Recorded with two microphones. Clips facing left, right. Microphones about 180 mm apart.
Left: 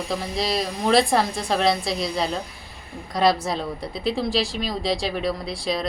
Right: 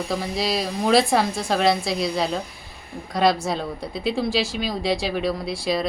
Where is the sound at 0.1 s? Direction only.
Centre (ahead or behind).